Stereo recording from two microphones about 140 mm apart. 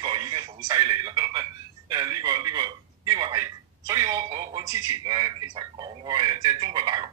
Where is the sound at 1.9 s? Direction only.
30° right (ahead or behind).